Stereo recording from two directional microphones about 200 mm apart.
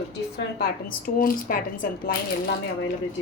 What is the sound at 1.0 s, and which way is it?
Speech, 45° left (ahead or behind).